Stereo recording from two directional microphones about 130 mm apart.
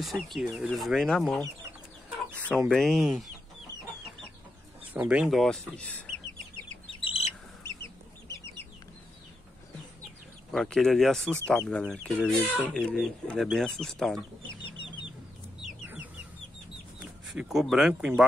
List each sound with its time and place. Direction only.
0.0 s speech: centre (ahead or behind)
2.7 s speech: centre (ahead or behind)
4.9 s speech: 10° right (ahead or behind)
5.8 s speech: 10° left (ahead or behind)
7.0 s bird: 45° left (ahead or behind)
10.5 s speech: 5° left (ahead or behind)
17.3 s speech: 5° right (ahead or behind)